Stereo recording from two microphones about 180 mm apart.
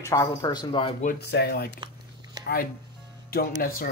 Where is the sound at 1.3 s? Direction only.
65° left (ahead or behind).